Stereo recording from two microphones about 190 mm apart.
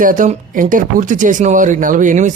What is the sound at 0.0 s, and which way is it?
Speech, 45° right (ahead or behind).